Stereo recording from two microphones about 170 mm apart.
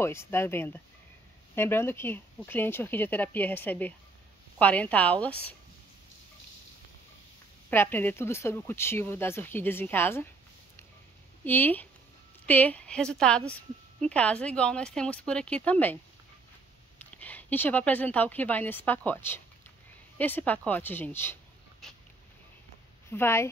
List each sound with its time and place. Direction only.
0.0 s speech: 15° left (ahead or behind)
7.7 s speech: 10° left (ahead or behind)
11.4 s a woman's voice: 10° left (ahead or behind)
17.2 s speech: 10° left (ahead or behind)
23.0 s speech: 15° left (ahead or behind)